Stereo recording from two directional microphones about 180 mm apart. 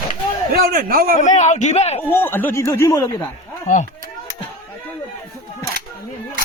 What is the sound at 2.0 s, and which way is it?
Speech, 10° left (ahead or behind).